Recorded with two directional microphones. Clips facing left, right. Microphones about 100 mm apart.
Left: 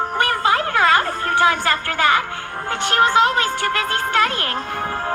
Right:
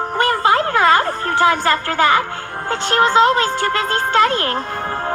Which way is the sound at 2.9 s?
35° right (ahead or behind).